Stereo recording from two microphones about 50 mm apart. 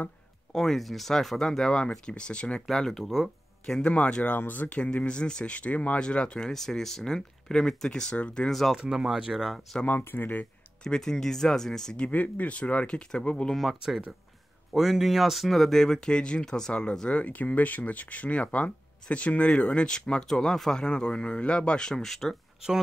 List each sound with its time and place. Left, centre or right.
0.5 s speech: centre
2.7 s speech: centre
3.0 s speech: centre
3.8 s speech: left
6.5 s speech: centre
8.5 s speech: centre
8.7 s speech: centre
9.8 s speech: left
10.8 s speech: centre
12.1 s speech: left
13.6 s speech: centre
17.1 s speech: left; by 20.8 s centre
20.8 s speech: centre